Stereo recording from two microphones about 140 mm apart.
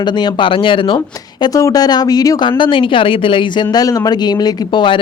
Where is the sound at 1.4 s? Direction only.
25° left (ahead or behind).